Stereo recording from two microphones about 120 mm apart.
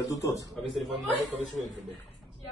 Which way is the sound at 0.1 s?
25° left (ahead or behind).